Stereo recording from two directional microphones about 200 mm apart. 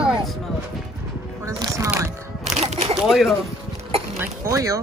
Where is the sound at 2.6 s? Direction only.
30° right (ahead or behind).